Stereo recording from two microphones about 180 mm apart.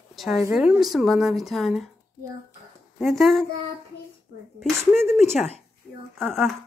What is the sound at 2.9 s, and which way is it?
Speech, centre (ahead or behind).